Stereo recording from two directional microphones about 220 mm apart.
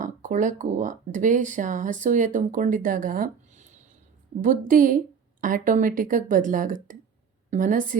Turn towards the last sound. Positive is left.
turn(degrees=-35)  # may be behind; listen again after turning